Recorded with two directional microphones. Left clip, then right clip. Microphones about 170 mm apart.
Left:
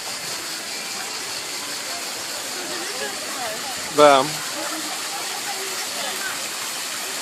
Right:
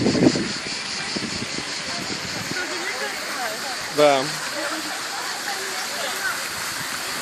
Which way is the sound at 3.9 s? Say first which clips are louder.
Left 4 dB; 30° left (ahead or behind).